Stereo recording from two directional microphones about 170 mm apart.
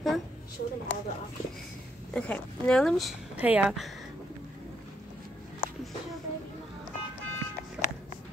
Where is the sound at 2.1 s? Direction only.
5° left (ahead or behind).